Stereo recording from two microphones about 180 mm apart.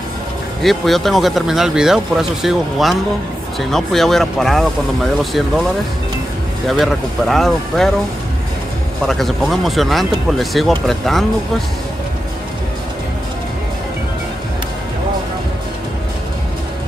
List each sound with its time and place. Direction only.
0.6 s speech: centre (ahead or behind)
6.7 s speech: centre (ahead or behind)
9.0 s speech: centre (ahead or behind)